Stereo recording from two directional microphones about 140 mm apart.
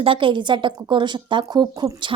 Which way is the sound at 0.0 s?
40° right (ahead or behind).